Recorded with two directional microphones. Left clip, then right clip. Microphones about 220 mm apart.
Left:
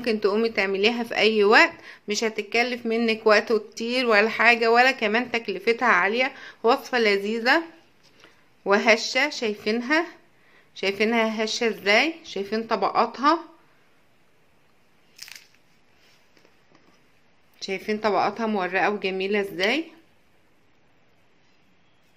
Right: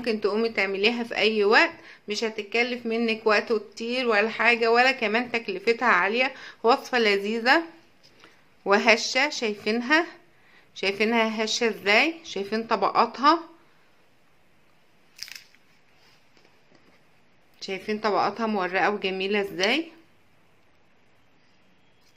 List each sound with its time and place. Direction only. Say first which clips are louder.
0.0 s a woman's voice: left 2 dB; 15° left (ahead or behind)
17.6 s a woman's voice: left 2 dB; 10° left (ahead or behind)